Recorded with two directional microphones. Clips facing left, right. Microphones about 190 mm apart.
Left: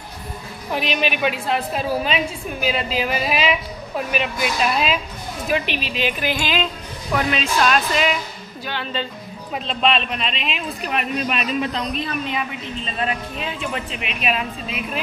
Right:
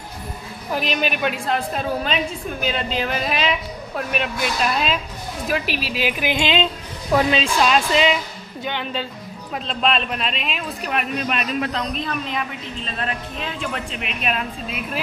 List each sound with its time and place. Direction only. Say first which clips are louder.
0.7 s a man's voice: even; centre (ahead or behind)
6.3 s speech: right 3 dB; 25° right (ahead or behind)
9.7 s a man's voice: left 1 dB; centre (ahead or behind)